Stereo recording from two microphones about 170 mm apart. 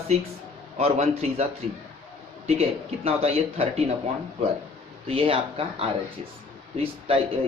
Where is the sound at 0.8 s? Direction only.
35° right (ahead or behind).